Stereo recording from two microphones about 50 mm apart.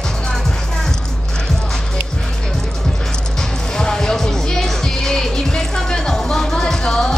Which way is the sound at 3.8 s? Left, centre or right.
Centre.